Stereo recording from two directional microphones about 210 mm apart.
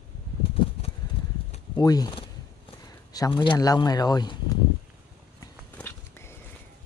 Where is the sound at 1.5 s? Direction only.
20° left (ahead or behind).